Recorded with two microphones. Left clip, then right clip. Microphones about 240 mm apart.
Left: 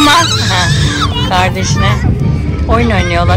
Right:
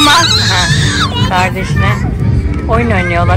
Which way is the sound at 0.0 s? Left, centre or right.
Centre.